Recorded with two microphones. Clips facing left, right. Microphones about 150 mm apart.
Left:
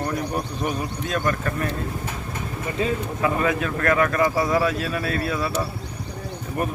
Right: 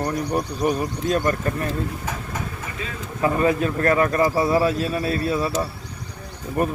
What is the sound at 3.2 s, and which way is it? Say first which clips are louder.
Speech: right 5 dB; 35° right (ahead or behind).